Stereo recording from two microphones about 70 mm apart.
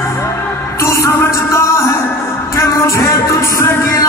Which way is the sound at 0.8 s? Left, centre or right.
Left.